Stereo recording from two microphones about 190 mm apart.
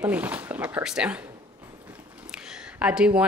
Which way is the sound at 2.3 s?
5° right (ahead or behind).